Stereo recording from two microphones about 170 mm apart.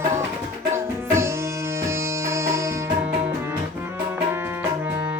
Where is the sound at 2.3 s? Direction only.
15° right (ahead or behind).